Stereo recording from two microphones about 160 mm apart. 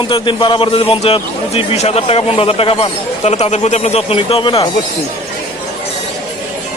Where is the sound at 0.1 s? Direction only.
30° left (ahead or behind).